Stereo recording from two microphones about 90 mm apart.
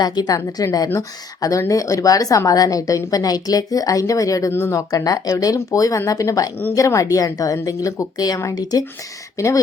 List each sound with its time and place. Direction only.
0.0 s a woman's voice: 45° left (ahead or behind)